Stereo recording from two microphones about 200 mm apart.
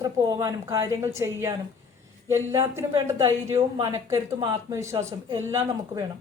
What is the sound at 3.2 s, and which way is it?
A woman's voice, 15° right (ahead or behind).